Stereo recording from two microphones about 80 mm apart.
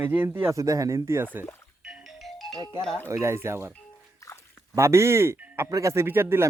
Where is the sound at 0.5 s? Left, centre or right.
Right.